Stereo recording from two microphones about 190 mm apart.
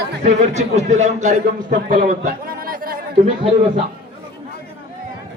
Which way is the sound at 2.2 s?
50° right (ahead or behind).